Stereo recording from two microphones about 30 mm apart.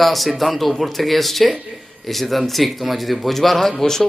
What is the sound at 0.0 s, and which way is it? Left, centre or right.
A man's voice, centre.